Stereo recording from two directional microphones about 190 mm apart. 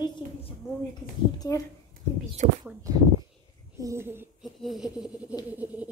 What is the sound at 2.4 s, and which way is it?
Speech, 40° right (ahead or behind).